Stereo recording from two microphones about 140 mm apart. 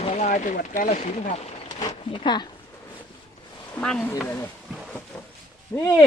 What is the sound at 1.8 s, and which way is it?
Speech, 35° left (ahead or behind).